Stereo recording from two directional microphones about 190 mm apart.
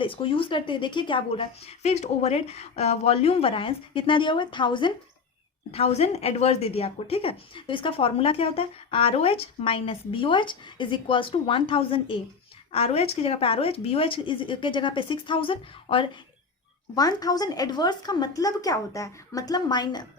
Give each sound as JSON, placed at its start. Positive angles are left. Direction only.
{"t": 0.0, "sound": "a woman's voice", "side_deg": 25}